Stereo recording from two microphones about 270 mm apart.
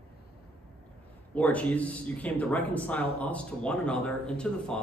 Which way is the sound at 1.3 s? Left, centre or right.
Centre.